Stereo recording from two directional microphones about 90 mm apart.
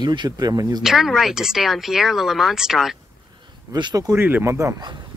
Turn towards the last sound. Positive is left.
turn(degrees=-30)  # may be behind; listen again after turning